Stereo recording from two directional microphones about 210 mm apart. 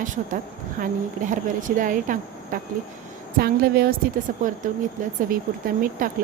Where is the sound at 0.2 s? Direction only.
40° right (ahead or behind).